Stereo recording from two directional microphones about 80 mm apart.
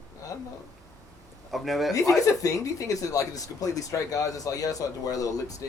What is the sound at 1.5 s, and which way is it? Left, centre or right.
Snicker, centre.